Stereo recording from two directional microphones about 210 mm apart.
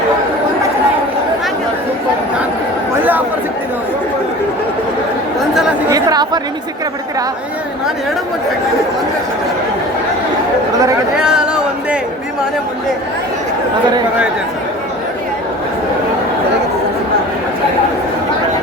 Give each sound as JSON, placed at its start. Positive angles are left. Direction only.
{"t": 3.0, "sound": "chatter", "side_deg": -10}
{"t": 5.9, "sound": "chatter", "side_deg": -20}
{"t": 11.2, "sound": "a sound", "side_deg": -5}